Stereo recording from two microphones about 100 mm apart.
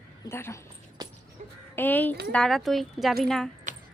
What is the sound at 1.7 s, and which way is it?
Speech, 20° left (ahead or behind).